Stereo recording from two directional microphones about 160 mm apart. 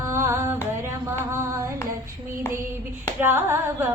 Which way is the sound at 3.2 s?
15° right (ahead or behind).